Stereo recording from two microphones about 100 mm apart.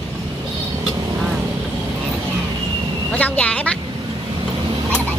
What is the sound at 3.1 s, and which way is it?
Vehicle, 15° left (ahead or behind).